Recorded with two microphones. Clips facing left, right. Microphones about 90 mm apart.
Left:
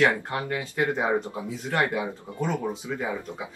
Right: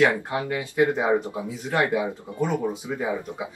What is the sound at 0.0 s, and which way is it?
Speech, 20° right (ahead or behind).